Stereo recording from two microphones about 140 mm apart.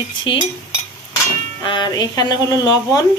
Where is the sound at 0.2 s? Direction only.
35° left (ahead or behind).